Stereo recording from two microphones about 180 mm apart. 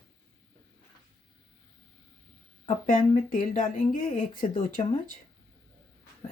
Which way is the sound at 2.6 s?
45° left (ahead or behind).